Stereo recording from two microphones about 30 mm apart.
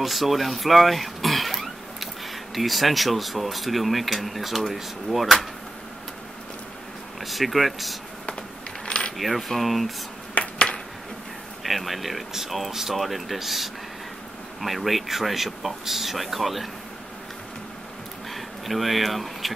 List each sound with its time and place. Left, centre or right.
0.0 s throat clearing: centre
2.5 s speech: centre
7.2 s speech: centre
8.3 s coin: left
9.2 s speech: centre
11.6 s speech: centre
18.3 s speech: centre